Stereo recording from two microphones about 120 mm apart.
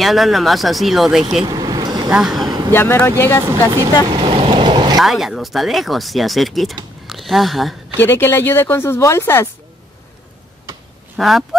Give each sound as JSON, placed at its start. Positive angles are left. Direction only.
{"t": 0.0, "sound": "speech", "side_deg": 0}
{"t": 1.5, "sound": "vehicle", "side_deg": -35}
{"t": 2.0, "sound": "speech", "side_deg": -5}
{"t": 2.7, "sound": "speech", "side_deg": 20}
{"t": 3.4, "sound": "speech", "side_deg": -30}
{"t": 4.1, "sound": "vehicle", "side_deg": -50}
{"t": 5.0, "sound": "speech", "side_deg": 0}
{"t": 8.0, "sound": "speech", "side_deg": 20}
{"t": 11.1, "sound": "speech", "side_deg": 0}